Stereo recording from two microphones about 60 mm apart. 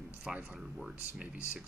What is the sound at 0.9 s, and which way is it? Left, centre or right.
Speech, right.